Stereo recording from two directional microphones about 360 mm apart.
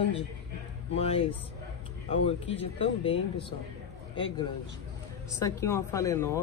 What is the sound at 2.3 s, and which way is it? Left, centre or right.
Speech, centre.